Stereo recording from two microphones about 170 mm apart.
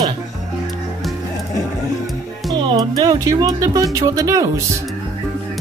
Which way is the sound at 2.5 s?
25° right (ahead or behind).